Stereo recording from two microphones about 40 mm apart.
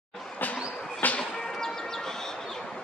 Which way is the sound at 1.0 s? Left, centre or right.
Left.